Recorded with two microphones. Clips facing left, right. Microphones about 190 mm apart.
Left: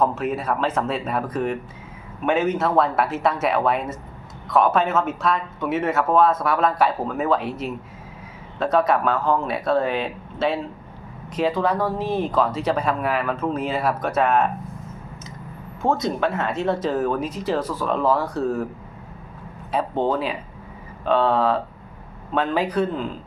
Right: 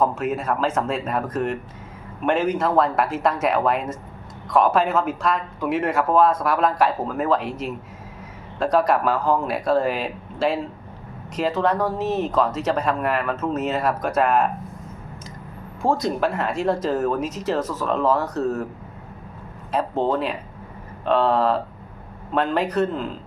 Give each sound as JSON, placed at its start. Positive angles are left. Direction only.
{"t": 0.3, "sound": "speech", "side_deg": 5}
{"t": 0.6, "sound": "speech", "side_deg": -5}
{"t": 0.9, "sound": "speech", "side_deg": 5}
{"t": 15.8, "sound": "speech", "side_deg": 0}
{"t": 19.7, "sound": "speech", "side_deg": 0}